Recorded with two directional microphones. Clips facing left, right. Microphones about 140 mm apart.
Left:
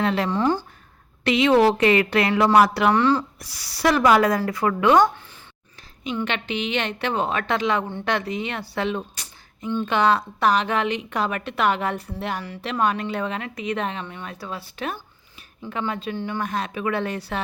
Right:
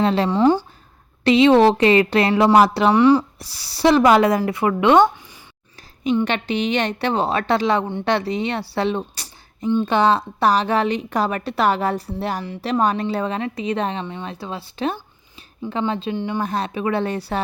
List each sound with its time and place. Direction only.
0.0 s speech: 30° right (ahead or behind)
0.3 s speech: 20° right (ahead or behind)
1.2 s speech: 30° right (ahead or behind)
2.9 s speech: 15° right (ahead or behind)
3.3 s speech: 30° right (ahead or behind)
6.2 s a woman's voice: 35° right (ahead or behind); by 16.4 s 20° right (ahead or behind)
16.4 s a woman's voice: 30° right (ahead or behind)